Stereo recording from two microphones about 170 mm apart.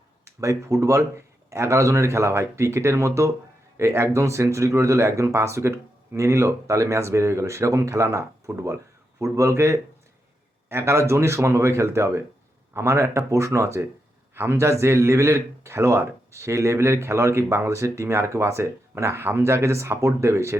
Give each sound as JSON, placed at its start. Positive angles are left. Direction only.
{"t": 0.3, "sound": "speech", "side_deg": -15}